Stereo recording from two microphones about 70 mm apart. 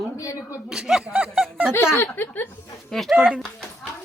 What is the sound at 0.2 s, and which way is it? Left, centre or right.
Speech, left.